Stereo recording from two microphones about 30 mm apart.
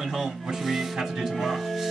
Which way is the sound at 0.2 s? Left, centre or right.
Centre.